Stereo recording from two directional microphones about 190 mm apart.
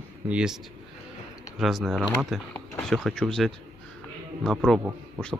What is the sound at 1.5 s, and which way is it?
Speech, centre (ahead or behind).